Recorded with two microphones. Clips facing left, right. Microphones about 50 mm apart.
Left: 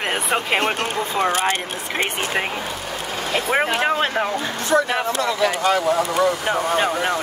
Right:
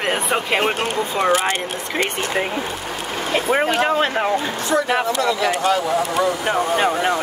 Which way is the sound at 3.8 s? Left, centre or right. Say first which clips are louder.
Right 2 dB; centre.